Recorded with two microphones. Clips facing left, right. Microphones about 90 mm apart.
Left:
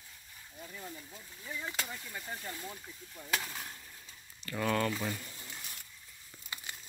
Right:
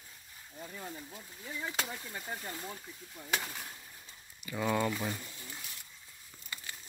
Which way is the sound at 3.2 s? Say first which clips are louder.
Even; centre (ahead or behind).